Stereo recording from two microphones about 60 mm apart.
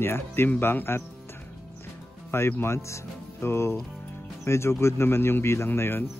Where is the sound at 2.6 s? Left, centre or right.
Left.